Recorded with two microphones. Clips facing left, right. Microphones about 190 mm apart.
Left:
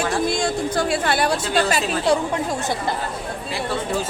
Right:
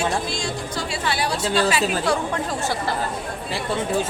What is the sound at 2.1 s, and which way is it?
Speech, 20° left (ahead or behind).